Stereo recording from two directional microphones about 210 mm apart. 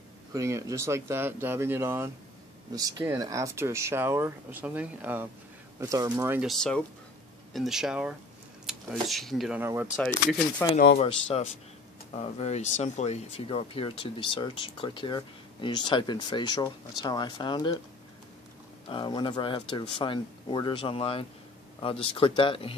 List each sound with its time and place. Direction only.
0.3 s speech: 15° right (ahead or behind)
6.4 s speech: centre (ahead or behind)
9.6 s speech: 10° right (ahead or behind)
10.6 s speech: 10° left (ahead or behind)
11.0 s speech: 30° left (ahead or behind)
18.9 s speech: 25° left (ahead or behind)